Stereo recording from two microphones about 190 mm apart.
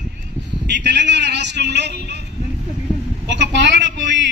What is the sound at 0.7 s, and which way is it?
A man's voice, 65° right (ahead or behind).